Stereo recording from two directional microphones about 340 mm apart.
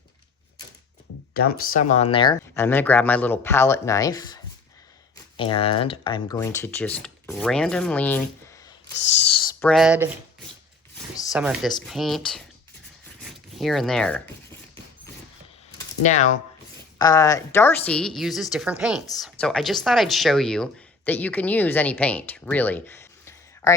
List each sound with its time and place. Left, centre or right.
1.3 s speech: left; by 4.4 s centre
5.4 s speech: centre
9.3 s a sound: centre
11.3 s speech: centre
13.6 s speech: centre
16.0 s speech: left
17.0 s speech: centre